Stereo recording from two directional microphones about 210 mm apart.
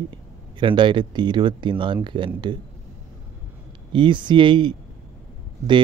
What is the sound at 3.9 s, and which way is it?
Speech, 20° right (ahead or behind).